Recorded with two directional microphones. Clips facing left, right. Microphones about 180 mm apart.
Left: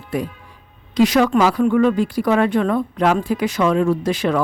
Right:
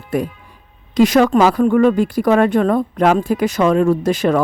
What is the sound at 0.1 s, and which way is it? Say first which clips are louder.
A man's voice: right 4 dB; 50° right (ahead or behind).